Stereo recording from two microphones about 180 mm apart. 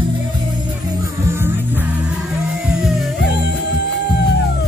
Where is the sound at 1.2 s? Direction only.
10° right (ahead or behind).